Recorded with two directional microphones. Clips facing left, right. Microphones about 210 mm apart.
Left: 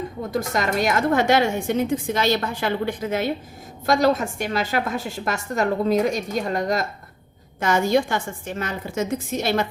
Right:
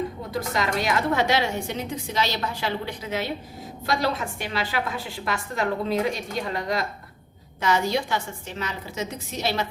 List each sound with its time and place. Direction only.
0.3 s speech: 45° left (ahead or behind)